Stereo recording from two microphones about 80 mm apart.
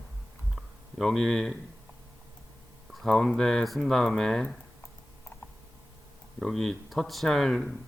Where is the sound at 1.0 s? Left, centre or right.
Centre.